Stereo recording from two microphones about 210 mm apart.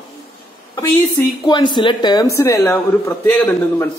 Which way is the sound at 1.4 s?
20° left (ahead or behind).